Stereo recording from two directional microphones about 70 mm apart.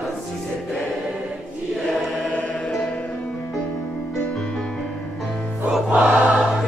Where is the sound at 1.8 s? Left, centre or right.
Centre.